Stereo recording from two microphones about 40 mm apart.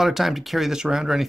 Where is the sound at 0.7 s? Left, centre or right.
Centre.